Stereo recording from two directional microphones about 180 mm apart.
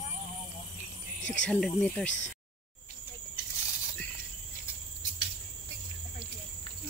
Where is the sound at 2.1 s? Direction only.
90° left.